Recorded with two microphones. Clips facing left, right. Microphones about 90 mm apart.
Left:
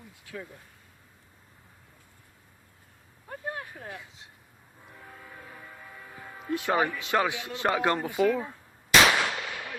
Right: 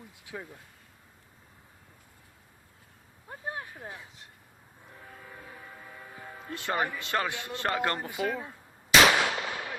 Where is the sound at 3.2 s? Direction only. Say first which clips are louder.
Left 2 dB; 20° right (ahead or behind).